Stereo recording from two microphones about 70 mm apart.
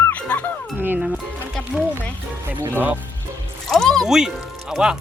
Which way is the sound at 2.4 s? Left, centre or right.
Right.